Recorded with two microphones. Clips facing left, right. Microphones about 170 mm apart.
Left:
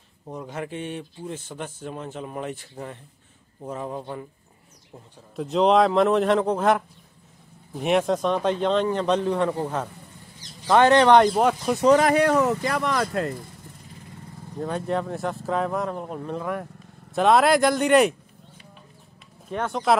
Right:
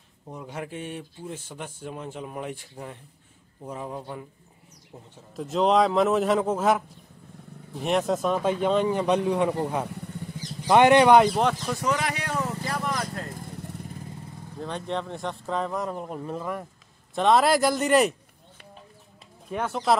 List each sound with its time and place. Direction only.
0.4 s a man's voice: 5° right (ahead or behind)
5.3 s a man's voice: centre (ahead or behind)
10.7 s a man's voice: 15° right (ahead or behind)
11.6 s speech: 20° left (ahead or behind)
11.9 s speech: 50° left (ahead or behind); by 13.3 s 90° left
14.6 s speech: 5° left (ahead or behind)
19.5 s speech: 5° right (ahead or behind)